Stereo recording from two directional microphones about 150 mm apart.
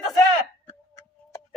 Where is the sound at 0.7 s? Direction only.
15° left (ahead or behind).